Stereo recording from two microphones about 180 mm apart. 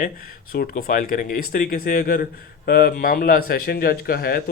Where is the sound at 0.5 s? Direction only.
55° left (ahead or behind).